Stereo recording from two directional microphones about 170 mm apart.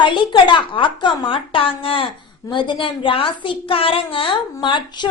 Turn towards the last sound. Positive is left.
turn(degrees=25)  # may be behind; listen again after turning